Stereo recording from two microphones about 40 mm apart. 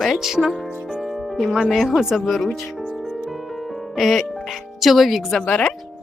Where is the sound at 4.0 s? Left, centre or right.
Centre.